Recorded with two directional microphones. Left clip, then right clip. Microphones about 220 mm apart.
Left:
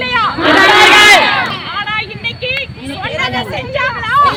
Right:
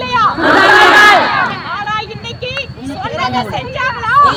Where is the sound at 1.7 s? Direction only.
10° right (ahead or behind).